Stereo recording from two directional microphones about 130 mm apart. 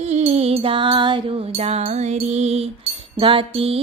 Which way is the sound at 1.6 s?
55° right (ahead or behind).